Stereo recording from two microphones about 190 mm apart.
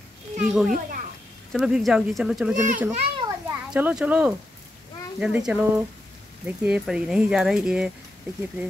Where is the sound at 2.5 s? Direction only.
45° right (ahead or behind).